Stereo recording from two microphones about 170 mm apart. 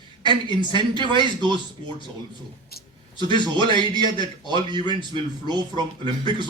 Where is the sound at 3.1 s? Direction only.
25° left (ahead or behind).